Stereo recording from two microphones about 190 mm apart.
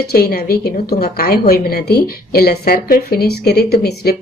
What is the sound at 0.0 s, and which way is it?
A woman's voice, 55° left (ahead or behind).